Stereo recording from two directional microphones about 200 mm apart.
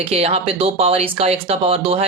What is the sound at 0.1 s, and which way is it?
Speech, 30° right (ahead or behind).